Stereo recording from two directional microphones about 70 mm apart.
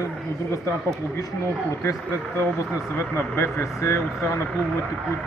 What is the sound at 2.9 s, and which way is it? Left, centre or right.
Speech, left.